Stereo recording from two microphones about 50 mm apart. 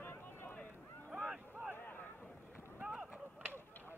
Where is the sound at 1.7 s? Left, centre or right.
Left.